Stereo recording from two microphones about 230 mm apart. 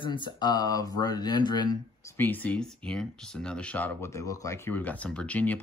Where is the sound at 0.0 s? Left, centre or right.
Left.